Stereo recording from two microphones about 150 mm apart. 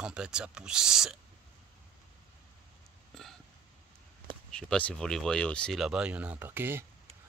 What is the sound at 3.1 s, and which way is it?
Burping, centre (ahead or behind).